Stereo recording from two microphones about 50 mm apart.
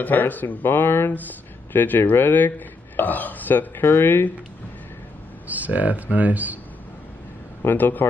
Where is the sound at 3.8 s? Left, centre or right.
Left.